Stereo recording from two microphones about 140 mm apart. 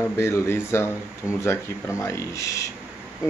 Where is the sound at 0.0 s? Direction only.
20° left (ahead or behind).